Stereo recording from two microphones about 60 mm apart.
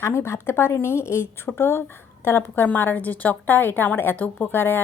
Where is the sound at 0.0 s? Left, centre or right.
Left.